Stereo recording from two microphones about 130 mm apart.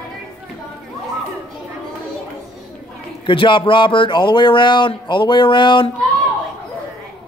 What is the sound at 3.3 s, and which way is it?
Speech, 40° left (ahead or behind).